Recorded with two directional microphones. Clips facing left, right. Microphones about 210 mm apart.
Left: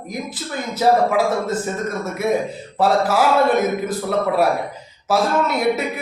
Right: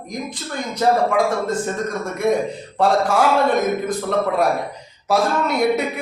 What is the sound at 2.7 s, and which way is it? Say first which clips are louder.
Speech: even; 5° left (ahead or behind).